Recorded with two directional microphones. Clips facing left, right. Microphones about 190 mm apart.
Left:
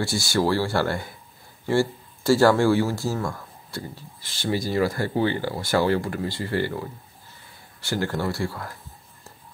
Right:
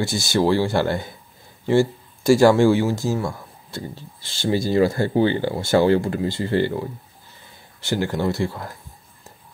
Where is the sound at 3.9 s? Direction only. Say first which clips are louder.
Right 3 dB; 25° right (ahead or behind).